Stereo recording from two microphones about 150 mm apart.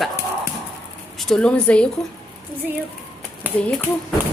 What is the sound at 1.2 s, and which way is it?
Speech, 5° left (ahead or behind).